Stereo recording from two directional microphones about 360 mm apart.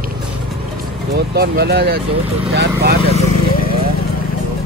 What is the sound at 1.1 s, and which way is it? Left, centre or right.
Speech, right.